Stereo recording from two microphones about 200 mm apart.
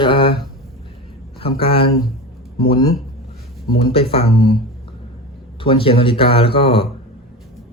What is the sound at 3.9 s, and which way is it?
Speech, 30° left (ahead or behind).